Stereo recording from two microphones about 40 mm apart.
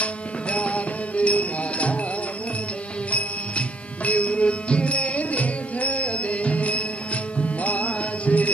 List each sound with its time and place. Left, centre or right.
0.0 s music: left
3.1 s music: left